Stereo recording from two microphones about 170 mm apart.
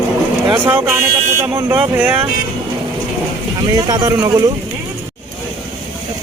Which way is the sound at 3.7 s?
25° right (ahead or behind).